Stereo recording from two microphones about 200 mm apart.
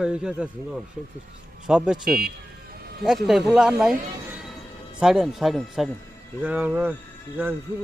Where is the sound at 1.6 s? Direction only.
5° right (ahead or behind).